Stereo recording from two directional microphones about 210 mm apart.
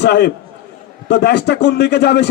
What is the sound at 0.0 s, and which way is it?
A man's voice, 55° left (ahead or behind).